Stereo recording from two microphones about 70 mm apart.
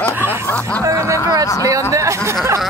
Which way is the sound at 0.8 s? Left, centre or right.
Right.